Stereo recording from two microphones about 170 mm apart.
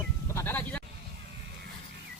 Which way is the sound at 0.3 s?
10° left (ahead or behind).